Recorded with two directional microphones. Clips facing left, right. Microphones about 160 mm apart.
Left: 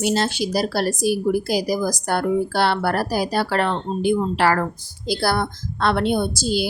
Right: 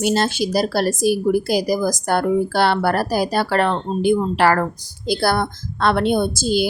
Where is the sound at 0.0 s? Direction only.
50° right (ahead or behind).